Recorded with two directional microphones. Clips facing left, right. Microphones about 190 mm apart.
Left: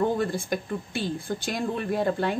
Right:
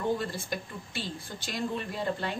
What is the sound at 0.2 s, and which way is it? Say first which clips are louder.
A woman's voice: left 7 dB; 50° left (ahead or behind).